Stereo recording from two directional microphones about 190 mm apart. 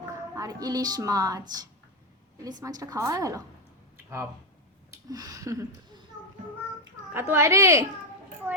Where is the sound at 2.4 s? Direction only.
20° right (ahead or behind).